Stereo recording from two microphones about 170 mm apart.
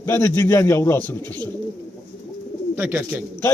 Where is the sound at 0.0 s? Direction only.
15° left (ahead or behind).